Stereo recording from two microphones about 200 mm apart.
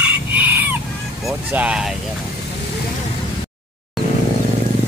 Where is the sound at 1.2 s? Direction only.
5° right (ahead or behind).